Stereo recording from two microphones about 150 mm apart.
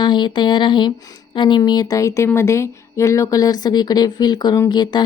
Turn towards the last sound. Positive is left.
turn(degrees=25)  # may be behind; listen again after turning